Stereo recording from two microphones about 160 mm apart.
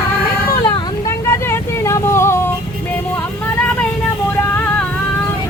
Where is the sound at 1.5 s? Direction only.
15° left (ahead or behind).